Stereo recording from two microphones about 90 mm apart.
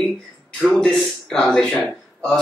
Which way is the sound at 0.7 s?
5° left (ahead or behind).